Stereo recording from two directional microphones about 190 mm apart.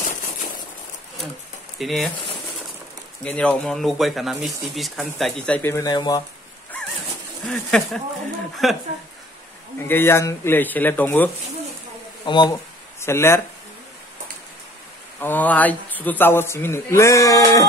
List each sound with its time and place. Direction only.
1.8 s speech: centre (ahead or behind)
3.3 s speech: 5° left (ahead or behind); by 6.2 s 20° left (ahead or behind)
7.4 s speech: centre (ahead or behind)
9.8 s a man's voice: 10° left (ahead or behind)
12.3 s a man's voice: 20° left (ahead or behind)
15.1 s a man's voice: 10° left (ahead or behind)